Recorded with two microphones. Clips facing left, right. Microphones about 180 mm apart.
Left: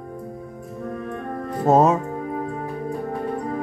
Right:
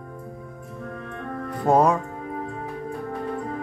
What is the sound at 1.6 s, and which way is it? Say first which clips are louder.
Music: left 2 dB; 25° left (ahead or behind).